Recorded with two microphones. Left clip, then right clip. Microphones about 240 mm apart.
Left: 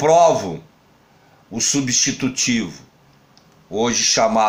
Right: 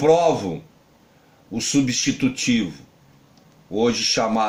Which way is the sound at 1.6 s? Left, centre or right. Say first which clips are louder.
Left 2 dB; left.